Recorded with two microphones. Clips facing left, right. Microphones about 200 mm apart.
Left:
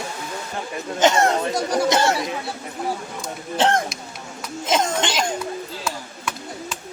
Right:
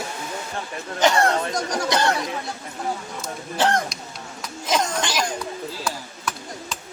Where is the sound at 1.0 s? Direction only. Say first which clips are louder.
Left 2 dB; 20° left (ahead or behind).